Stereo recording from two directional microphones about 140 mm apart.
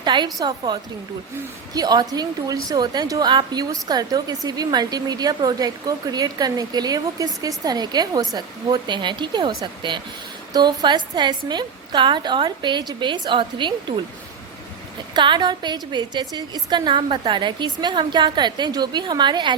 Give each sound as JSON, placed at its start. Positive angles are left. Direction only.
{"t": 0.0, "sound": "a woman's voice", "side_deg": -35}
{"t": 15.1, "sound": "a woman's voice", "side_deg": -35}